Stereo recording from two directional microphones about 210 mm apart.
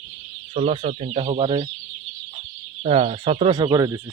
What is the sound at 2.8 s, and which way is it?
Speech, 30° right (ahead or behind).